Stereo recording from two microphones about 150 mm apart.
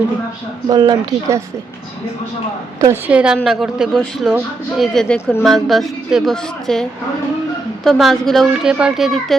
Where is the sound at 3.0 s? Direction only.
10° right (ahead or behind).